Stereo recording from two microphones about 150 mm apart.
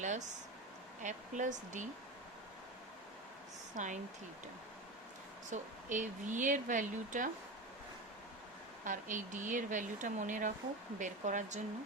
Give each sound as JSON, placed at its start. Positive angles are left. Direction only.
{"t": 0.0, "sound": "a sound", "side_deg": -55}
{"t": 1.0, "sound": "speech", "side_deg": -55}
{"t": 3.8, "sound": "speech", "side_deg": -55}
{"t": 5.5, "sound": "speech", "side_deg": -55}
{"t": 8.8, "sound": "speech", "side_deg": -60}